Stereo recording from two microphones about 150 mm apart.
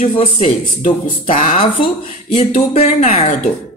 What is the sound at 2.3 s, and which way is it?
Speech, 45° left (ahead or behind).